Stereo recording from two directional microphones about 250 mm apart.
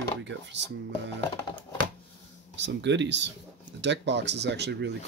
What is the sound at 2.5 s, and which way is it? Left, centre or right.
Speech, right.